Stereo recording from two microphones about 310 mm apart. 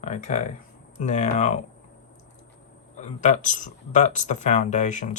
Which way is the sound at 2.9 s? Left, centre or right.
Left.